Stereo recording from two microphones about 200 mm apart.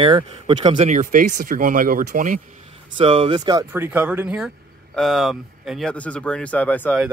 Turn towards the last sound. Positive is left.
turn(degrees=10)  # may be behind; listen again after turning